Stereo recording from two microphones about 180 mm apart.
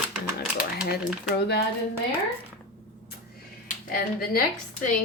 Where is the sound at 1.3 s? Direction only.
70° left (ahead or behind).